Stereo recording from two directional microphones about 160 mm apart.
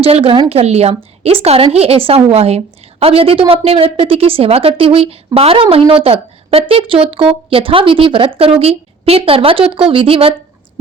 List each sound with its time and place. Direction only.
0.0 s a woman's voice: 40° right (ahead or behind)